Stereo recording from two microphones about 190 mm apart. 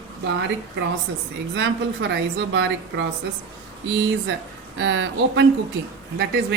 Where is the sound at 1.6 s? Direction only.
70° right (ahead or behind).